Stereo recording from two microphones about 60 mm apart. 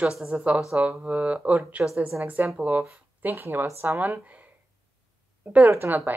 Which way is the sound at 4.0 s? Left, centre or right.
Right.